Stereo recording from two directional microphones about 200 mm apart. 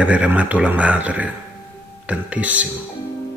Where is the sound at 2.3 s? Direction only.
5° right (ahead or behind).